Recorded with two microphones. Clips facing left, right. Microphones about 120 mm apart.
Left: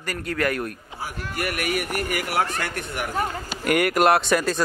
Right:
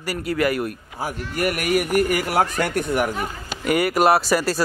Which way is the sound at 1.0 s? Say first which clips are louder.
Right 5 dB; 40° right (ahead or behind).